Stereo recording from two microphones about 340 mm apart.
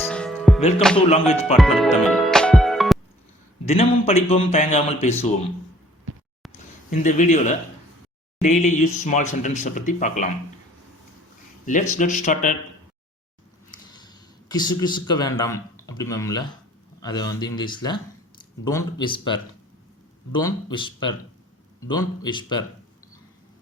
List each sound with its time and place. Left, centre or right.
0.0 s music: centre
0.8 s speech: centre
1.1 s speech: centre
1.5 s music: centre
3.7 s a man's voice: centre
6.9 s speech: left
11.6 s speech: left
13.9 s a man's voice: centre